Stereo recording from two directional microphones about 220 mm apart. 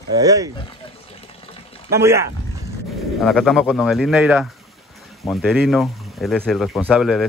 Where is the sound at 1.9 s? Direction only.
10° right (ahead or behind).